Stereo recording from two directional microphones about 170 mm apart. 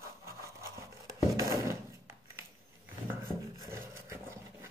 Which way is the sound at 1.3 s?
15° right (ahead or behind).